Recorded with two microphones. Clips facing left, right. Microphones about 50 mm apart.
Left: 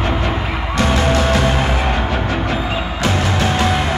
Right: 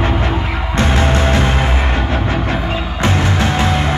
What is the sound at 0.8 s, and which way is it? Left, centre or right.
Music, right.